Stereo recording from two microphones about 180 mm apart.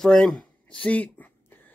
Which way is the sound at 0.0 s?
5° left (ahead or behind).